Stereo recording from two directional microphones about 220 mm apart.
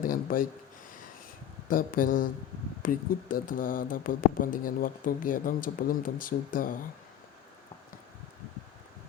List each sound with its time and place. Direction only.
0.0 s speech: 40° left (ahead or behind)
1.6 s speech: 40° left (ahead or behind)